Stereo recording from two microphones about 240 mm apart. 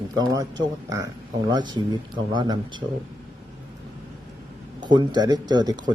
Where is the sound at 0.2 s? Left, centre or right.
Centre.